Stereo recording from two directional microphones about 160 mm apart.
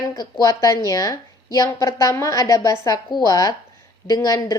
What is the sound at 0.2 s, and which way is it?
A woman's voice, 20° left (ahead or behind).